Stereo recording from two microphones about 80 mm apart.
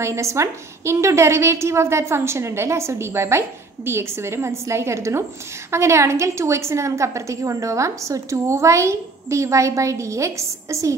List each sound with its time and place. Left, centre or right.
0.0 s a woman's voice: right